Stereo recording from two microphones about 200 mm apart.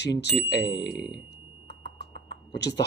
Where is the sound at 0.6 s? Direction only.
20° left (ahead or behind).